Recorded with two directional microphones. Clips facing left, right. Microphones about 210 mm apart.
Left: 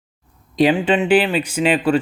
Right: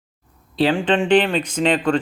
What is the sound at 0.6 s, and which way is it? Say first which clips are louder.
Speech: left 2 dB; 10° left (ahead or behind).